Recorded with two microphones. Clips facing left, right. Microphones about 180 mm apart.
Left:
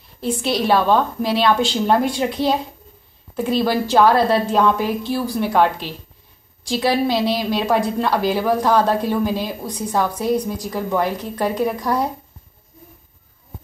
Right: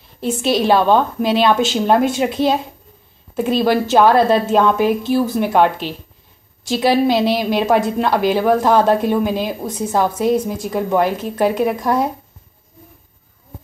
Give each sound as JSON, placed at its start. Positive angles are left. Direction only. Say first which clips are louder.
{"t": 0.2, "sound": "a woman's voice", "louder": "right 3 dB", "side_deg": -20}